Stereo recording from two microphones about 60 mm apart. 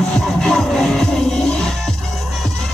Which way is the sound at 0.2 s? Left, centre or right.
Centre.